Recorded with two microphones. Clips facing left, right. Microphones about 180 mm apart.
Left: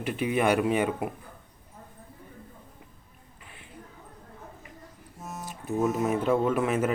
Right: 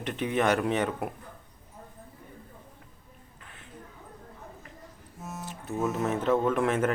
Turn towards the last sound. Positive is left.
turn(degrees=5)  # may be behind; listen again after turning